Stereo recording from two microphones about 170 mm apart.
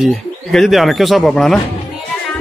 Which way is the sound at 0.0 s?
Centre (ahead or behind).